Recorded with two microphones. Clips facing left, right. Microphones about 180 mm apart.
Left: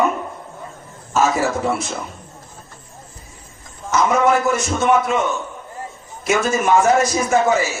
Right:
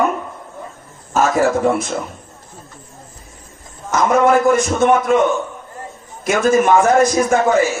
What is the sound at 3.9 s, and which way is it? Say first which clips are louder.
A man's voice: right 3 dB; 55° right (ahead or behind).